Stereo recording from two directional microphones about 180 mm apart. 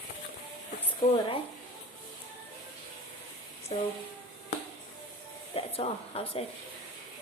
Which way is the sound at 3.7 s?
30° left (ahead or behind).